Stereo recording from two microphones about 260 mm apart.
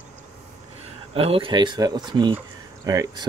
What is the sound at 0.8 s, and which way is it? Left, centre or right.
Speech, right.